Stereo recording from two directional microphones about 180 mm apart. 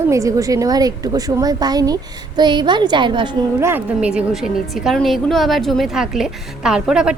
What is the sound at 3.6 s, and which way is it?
A woman's voice, 10° right (ahead or behind).